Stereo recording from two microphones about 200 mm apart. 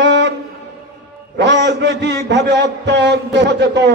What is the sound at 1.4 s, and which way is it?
A man's voice, 60° right (ahead or behind).